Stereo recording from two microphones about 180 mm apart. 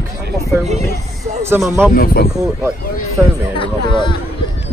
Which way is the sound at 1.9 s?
55° left (ahead or behind).